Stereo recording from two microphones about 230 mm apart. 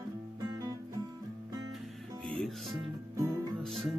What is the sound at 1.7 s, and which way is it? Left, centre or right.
Music, centre.